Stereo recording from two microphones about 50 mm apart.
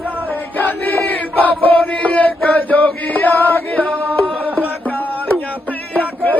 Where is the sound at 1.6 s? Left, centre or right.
Left.